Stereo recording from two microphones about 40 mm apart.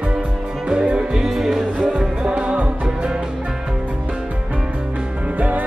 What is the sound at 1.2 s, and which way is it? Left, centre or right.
Music, centre.